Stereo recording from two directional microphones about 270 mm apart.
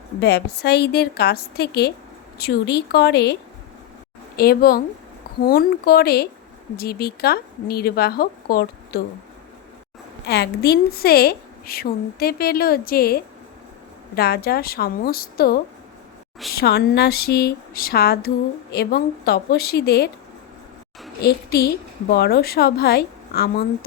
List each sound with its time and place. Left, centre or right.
0.2 s a woman's voice: left
4.4 s a woman's voice: left
10.2 s a woman's voice: left
21.2 s a woman's voice: left